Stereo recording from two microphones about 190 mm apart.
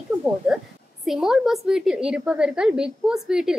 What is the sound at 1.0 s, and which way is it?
A woman's voice, centre (ahead or behind).